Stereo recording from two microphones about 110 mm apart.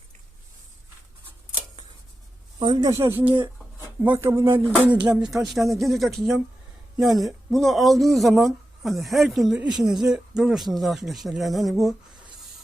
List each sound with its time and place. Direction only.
2.6 s speech: 45° right (ahead or behind)
2.9 s a sound: 25° right (ahead or behind)
5.0 s speech: 5° right (ahead or behind)